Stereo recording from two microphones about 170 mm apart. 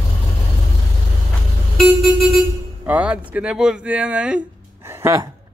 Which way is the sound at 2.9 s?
10° right (ahead or behind).